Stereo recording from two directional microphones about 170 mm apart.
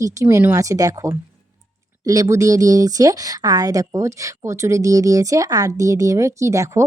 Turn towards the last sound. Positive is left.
turn(degrees=-15)  # may be behind; listen again after turning